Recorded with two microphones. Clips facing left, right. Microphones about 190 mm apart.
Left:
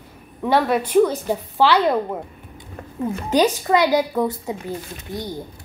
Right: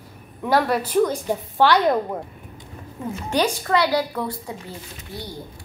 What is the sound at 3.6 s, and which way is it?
Speech, 15° left (ahead or behind).